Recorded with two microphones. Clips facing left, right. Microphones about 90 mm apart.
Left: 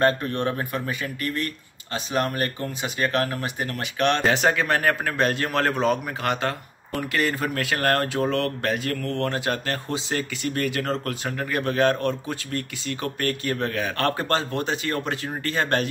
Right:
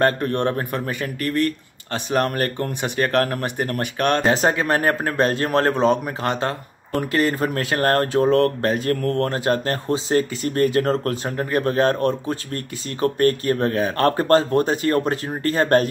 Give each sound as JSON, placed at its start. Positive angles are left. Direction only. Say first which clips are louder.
{"t": 0.0, "sound": "speech", "louder": "right 3 dB", "side_deg": -55}